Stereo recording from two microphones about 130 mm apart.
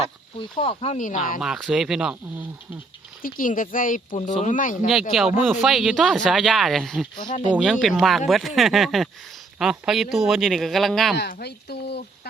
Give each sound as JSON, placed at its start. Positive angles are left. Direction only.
{"t": 0.0, "sound": "speech", "side_deg": 45}
{"t": 0.9, "sound": "speech", "side_deg": 80}
{"t": 1.4, "sound": "speech", "side_deg": 0}
{"t": 3.2, "sound": "speech", "side_deg": 90}
{"t": 4.9, "sound": "speech", "side_deg": 0}
{"t": 7.3, "sound": "speech", "side_deg": 70}
{"t": 7.5, "sound": "speech", "side_deg": -5}